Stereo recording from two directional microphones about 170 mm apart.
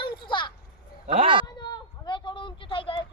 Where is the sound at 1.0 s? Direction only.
30° right (ahead or behind).